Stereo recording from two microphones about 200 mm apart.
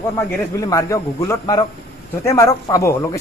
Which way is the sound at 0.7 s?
15° left (ahead or behind).